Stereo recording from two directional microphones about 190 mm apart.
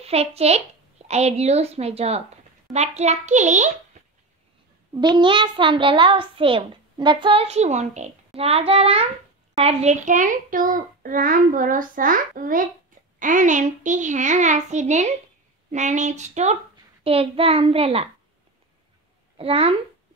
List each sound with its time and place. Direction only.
0.0 s a woman's voice: 30° right (ahead or behind)
4.9 s a child's voice: 20° right (ahead or behind)
19.3 s a child's voice: 30° right (ahead or behind)